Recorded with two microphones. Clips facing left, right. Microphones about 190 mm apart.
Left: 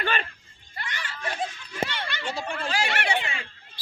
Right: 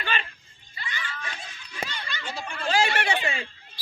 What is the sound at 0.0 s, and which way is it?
Music, 55° left (ahead or behind).